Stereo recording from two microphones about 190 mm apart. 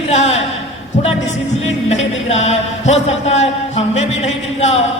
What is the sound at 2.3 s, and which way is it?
Speech, 35° left (ahead or behind).